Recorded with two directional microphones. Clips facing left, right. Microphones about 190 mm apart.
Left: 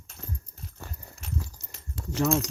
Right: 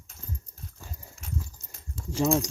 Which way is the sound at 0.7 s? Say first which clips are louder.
Left 5 dB; 70° left (ahead or behind).